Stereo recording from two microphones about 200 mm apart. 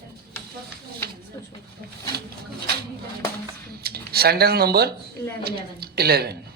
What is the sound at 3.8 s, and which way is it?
A woman's voice, 50° right (ahead or behind).